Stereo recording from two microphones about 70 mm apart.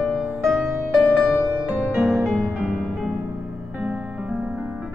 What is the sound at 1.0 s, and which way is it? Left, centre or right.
Music, centre.